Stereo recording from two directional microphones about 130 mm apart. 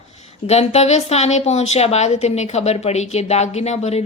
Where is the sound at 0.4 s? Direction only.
55° left (ahead or behind).